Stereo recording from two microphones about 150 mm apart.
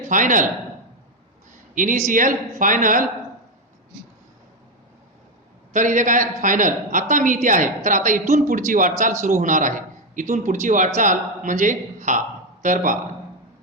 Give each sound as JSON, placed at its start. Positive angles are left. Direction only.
{"t": 0.1, "sound": "a man's voice", "side_deg": -60}
{"t": 1.7, "sound": "a man's voice", "side_deg": -60}
{"t": 5.7, "sound": "a man's voice", "side_deg": -55}